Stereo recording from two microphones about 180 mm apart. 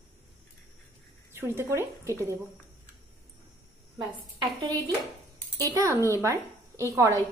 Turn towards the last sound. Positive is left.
turn(degrees=-15)  # may be behind; listen again after turning